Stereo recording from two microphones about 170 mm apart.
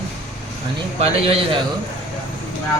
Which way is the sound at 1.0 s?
35° right (ahead or behind).